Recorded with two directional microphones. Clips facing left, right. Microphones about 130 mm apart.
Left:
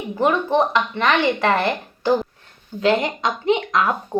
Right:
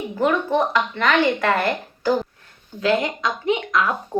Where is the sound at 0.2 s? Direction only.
25° left (ahead or behind).